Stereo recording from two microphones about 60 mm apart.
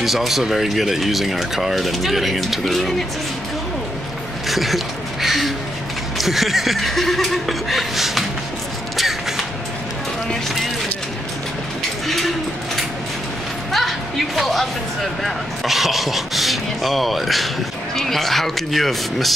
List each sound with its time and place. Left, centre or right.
0.0 s speech: centre
4.5 s a sound: centre
6.1 s speech: centre
8.9 s a sound: centre
13.7 s music: centre
15.2 s speech: centre